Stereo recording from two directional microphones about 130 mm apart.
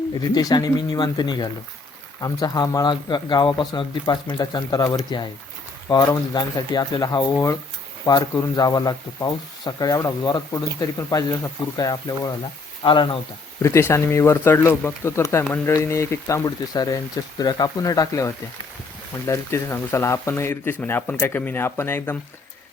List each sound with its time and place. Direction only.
0.1 s speech: 30° left (ahead or behind)
12.8 s speech: 40° left (ahead or behind)
13.6 s speech: 20° left (ahead or behind)